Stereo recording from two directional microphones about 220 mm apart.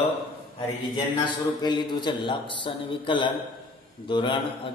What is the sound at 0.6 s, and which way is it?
A man's voice, 20° left (ahead or behind).